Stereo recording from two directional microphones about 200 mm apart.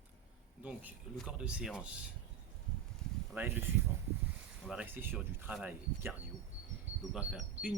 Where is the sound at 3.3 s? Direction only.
10° right (ahead or behind).